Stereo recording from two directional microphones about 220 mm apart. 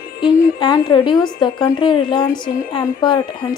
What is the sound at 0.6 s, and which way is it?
A woman's voice, 20° left (ahead or behind).